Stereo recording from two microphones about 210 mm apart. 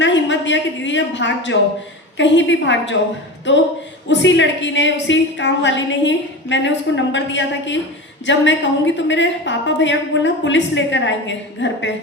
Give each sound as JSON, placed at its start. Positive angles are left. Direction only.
{"t": 0.0, "sound": "a woman's voice", "side_deg": 60}